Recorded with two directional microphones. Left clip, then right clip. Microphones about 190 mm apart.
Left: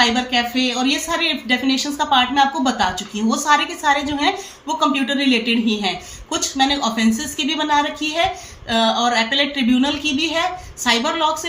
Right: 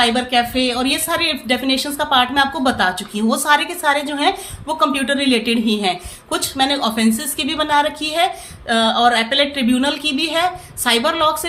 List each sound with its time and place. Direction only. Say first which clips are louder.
0.0 s speech: right 1 dB; 35° right (ahead or behind)